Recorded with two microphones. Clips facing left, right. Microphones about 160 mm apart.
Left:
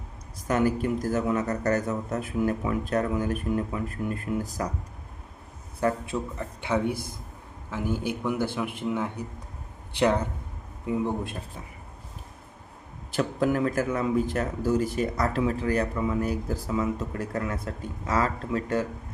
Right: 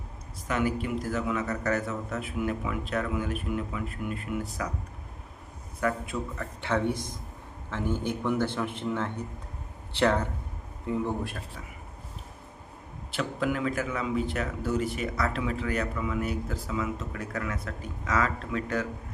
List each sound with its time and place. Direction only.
0.4 s speech: 40° left (ahead or behind)
5.8 s a man's voice: 25° left (ahead or behind)
6.6 s speech: 15° left (ahead or behind)
13.1 s speech: 40° left (ahead or behind)